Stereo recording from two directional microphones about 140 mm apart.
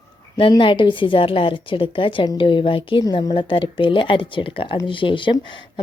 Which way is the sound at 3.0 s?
25° left (ahead or behind).